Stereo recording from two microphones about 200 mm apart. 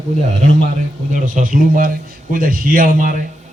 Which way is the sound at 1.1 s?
40° right (ahead or behind).